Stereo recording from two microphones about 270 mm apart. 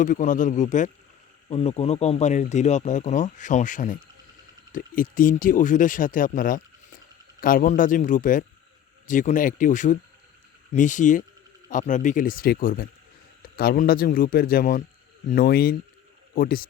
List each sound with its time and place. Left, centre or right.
0.0 s speech: left